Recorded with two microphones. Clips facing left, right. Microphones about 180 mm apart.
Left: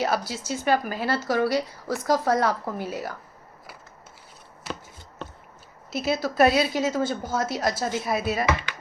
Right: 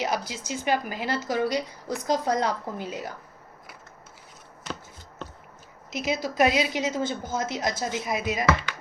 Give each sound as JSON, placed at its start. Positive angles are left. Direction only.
{"t": 0.0, "sound": "a woman's voice", "side_deg": -15}
{"t": 5.9, "sound": "a woman's voice", "side_deg": -15}